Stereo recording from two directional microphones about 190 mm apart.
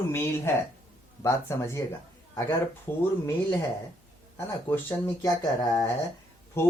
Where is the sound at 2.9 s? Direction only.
15° left (ahead or behind).